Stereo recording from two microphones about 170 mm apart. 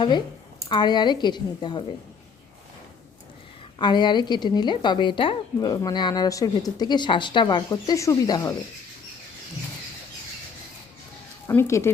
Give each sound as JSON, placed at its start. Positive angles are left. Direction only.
{"t": 0.7, "sound": "speech", "side_deg": 25}
{"t": 3.8, "sound": "speech", "side_deg": 25}
{"t": 11.4, "sound": "speech", "side_deg": 15}